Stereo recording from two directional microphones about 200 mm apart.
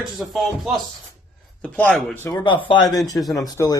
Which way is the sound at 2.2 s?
20° left (ahead or behind).